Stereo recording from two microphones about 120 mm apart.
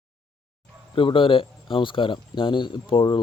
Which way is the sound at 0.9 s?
45° left (ahead or behind).